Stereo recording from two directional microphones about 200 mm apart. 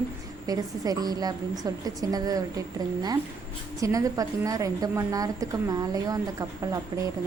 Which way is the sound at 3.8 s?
15° right (ahead or behind).